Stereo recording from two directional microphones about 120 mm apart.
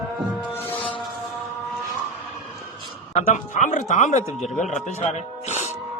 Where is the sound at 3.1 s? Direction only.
75° left (ahead or behind).